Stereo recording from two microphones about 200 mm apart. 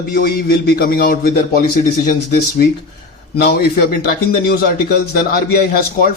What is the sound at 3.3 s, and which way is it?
A man's voice, 55° left (ahead or behind).